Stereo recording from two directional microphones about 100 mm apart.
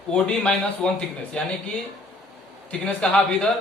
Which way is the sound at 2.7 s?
10° left (ahead or behind).